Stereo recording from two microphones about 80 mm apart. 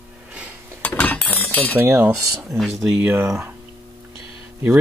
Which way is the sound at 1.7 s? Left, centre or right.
Right.